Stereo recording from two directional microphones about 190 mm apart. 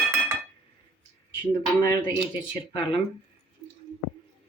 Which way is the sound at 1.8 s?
20° left (ahead or behind).